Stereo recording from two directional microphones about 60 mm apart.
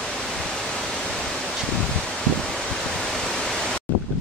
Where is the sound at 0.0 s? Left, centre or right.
Centre.